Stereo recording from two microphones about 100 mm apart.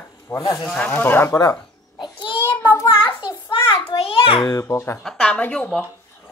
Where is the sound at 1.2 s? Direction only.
35° left (ahead or behind).